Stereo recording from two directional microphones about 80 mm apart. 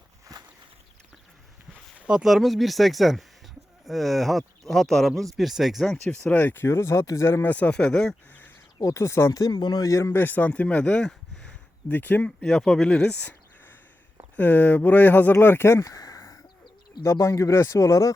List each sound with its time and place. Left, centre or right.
2.0 s a sound: centre
2.2 s speech: centre
6.1 s speech: left
7.4 s speech: centre
8.3 s a sound: left
8.8 s speech: left
9.4 s speech: left
9.8 s speech: left
10.2 s speech: left
11.9 s speech: left
12.4 s speech: centre
14.3 s speech: left
15.8 s a sound: left
17.0 s speech: left